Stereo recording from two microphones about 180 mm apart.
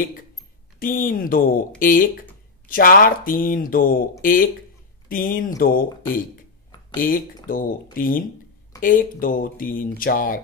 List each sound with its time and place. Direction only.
0.7 s speech: 50° left (ahead or behind)